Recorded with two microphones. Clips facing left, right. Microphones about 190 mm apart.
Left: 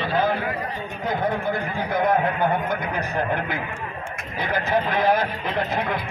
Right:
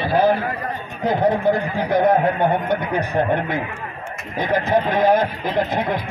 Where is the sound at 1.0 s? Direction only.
35° right (ahead or behind).